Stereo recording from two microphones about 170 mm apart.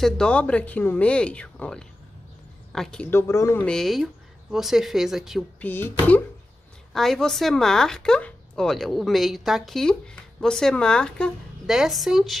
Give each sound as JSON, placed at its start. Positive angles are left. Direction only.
{"t": 0.0, "sound": "a woman's voice", "side_deg": 5}
{"t": 3.1, "sound": "speech", "side_deg": 15}
{"t": 3.6, "sound": "a woman's voice", "side_deg": 0}
{"t": 5.6, "sound": "a woman's voice", "side_deg": 10}